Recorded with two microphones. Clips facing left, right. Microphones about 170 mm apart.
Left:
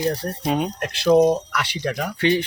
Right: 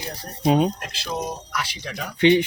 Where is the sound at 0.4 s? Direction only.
25° right (ahead or behind).